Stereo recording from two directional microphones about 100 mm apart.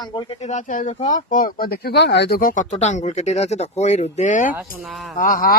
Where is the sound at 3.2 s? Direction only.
90° left.